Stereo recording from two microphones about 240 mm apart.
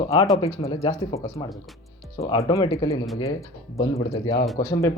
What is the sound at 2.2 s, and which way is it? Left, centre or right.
Speech, centre.